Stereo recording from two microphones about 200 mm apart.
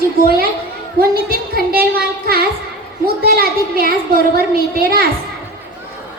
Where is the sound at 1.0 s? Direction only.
50° right (ahead or behind).